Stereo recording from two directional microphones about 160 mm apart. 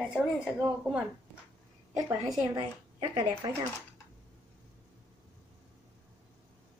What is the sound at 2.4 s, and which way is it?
A woman's voice, 25° right (ahead or behind).